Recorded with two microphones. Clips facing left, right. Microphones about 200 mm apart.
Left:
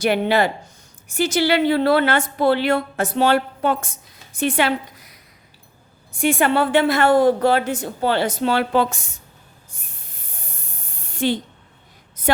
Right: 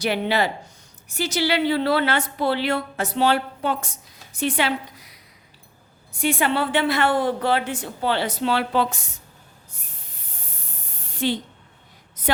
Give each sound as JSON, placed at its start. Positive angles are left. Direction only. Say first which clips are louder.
{"t": 0.0, "sound": "a woman's voice", "louder": "left 4 dB", "side_deg": 50}
{"t": 6.1, "sound": "a woman's voice", "louder": "left 4 dB", "side_deg": 50}
{"t": 11.0, "sound": "a sound", "louder": "left 3 dB", "side_deg": 50}